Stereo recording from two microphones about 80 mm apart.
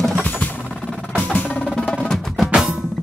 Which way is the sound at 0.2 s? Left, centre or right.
Left.